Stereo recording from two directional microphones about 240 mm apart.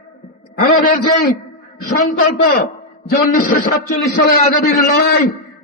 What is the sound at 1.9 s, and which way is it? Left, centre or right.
A man's voice, left.